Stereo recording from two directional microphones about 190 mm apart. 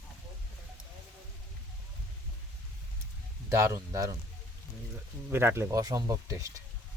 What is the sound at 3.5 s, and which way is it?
Speech, 15° right (ahead or behind).